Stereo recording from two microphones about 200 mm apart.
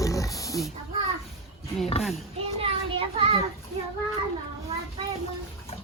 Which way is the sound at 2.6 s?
30° right (ahead or behind).